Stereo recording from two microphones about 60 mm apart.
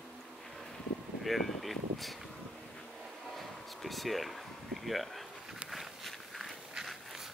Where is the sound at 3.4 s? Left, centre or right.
Centre.